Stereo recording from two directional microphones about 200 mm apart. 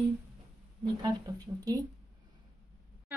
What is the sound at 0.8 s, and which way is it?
Speech, 20° right (ahead or behind).